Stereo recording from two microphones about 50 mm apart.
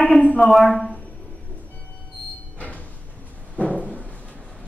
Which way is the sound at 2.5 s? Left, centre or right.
Left.